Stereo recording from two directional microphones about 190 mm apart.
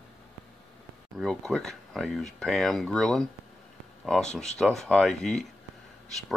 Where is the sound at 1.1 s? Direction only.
Centre (ahead or behind).